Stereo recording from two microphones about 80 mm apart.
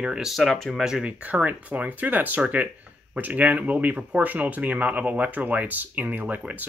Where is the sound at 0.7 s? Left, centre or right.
Centre.